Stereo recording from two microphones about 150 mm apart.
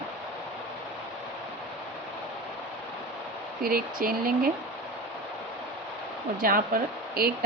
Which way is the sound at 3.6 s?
75° right (ahead or behind).